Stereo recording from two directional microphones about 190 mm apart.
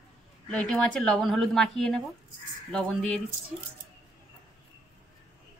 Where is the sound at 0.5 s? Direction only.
5° left (ahead or behind).